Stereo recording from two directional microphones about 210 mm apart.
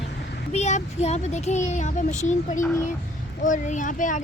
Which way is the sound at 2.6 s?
15° left (ahead or behind).